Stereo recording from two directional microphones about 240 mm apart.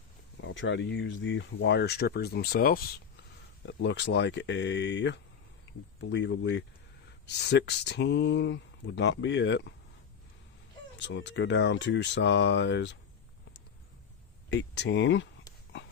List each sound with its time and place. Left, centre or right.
0.4 s speech: left
3.7 s speech: left
10.9 s speech: left
14.5 s speech: left